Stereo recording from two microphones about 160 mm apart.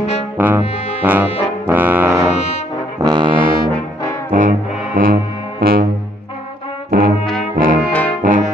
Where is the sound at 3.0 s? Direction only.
25° right (ahead or behind).